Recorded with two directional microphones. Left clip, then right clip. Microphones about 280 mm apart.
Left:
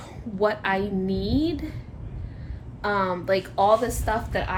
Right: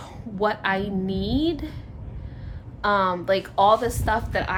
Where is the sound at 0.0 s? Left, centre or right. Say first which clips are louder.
Even; centre.